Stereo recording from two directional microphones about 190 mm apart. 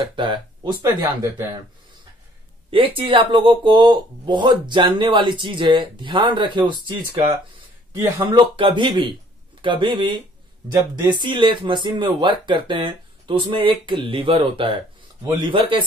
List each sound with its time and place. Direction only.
0.1 s speech: 25° right (ahead or behind)
2.7 s speech: 30° right (ahead or behind)
7.9 s speech: 15° right (ahead or behind)
8.5 s speech: 25° right (ahead or behind)